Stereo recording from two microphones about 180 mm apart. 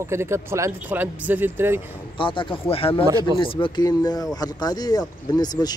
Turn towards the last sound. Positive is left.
turn(degrees=20)  # may be behind; listen again after turning